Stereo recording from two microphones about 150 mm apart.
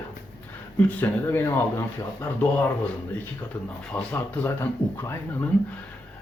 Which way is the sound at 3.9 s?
10° left (ahead or behind).